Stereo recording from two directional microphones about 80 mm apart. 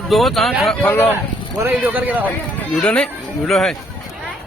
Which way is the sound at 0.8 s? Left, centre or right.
Left.